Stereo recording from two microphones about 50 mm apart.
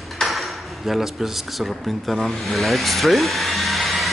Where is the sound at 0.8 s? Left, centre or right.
Centre.